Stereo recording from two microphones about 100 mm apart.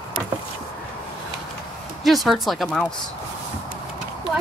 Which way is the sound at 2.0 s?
Centre (ahead or behind).